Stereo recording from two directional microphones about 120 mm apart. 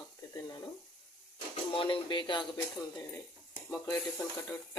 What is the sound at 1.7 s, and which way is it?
Speech, 45° left (ahead or behind).